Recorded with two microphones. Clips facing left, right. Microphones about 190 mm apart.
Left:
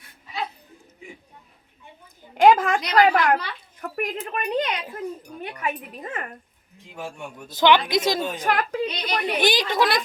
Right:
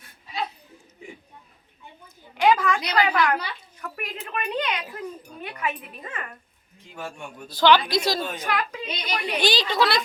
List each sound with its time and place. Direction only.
2.4 s a woman's voice: 50° left (ahead or behind)
6.9 s speech: 15° left (ahead or behind)
8.4 s a woman's voice: 50° left (ahead or behind)
9.0 s a woman's voice: 35° left (ahead or behind)
9.4 s speech: 20° left (ahead or behind)